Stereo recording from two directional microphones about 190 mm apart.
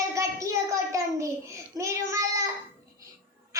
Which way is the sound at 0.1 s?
15° right (ahead or behind).